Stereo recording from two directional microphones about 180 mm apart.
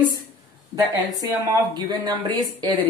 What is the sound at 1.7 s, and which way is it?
Speech, 25° right (ahead or behind).